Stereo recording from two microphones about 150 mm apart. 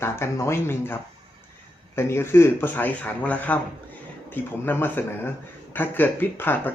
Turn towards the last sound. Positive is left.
turn(degrees=15)  # may be behind; listen again after turning